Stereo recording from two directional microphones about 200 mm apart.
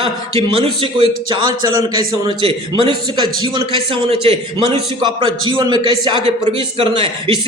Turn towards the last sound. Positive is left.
turn(degrees=-25)  # may be behind; listen again after turning